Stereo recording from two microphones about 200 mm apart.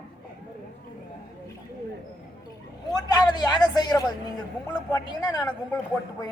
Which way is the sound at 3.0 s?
20° left (ahead or behind).